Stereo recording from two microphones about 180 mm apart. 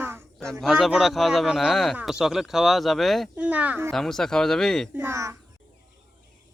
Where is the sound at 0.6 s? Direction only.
Centre (ahead or behind).